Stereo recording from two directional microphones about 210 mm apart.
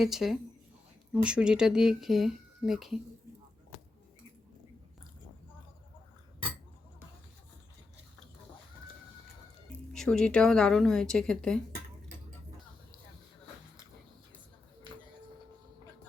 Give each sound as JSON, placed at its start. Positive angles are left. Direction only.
{"t": 0.0, "sound": "speech", "side_deg": 0}
{"t": 9.9, "sound": "speech", "side_deg": 5}